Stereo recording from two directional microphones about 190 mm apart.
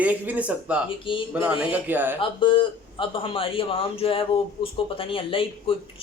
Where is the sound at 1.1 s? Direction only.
25° left (ahead or behind).